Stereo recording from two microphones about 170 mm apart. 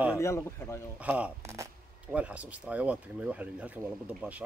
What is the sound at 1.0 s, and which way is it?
Speech, 10° right (ahead or behind).